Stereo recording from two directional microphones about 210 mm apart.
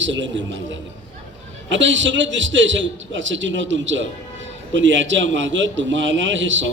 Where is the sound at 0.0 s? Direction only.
60° right (ahead or behind).